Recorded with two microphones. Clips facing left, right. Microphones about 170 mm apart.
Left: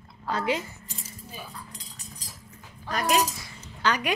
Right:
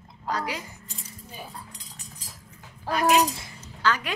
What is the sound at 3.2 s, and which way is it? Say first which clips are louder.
Speech: right 3 dB; 30° right (ahead or behind).